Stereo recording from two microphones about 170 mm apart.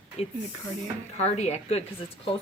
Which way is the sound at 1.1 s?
40° left (ahead or behind).